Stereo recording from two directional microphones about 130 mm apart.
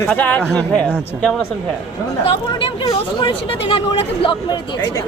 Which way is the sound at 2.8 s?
30° left (ahead or behind).